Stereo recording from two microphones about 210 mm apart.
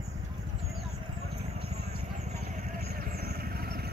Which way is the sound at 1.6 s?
30° right (ahead or behind).